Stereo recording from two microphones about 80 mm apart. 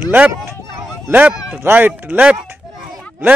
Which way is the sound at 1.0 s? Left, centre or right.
Centre.